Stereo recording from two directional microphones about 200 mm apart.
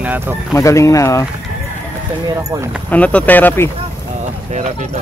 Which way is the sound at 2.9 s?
5° left (ahead or behind).